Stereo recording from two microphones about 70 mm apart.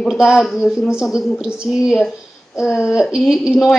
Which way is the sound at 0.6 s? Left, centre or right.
Centre.